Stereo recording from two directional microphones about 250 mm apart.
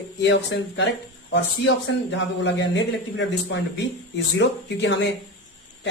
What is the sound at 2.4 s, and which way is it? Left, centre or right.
A man's voice, left.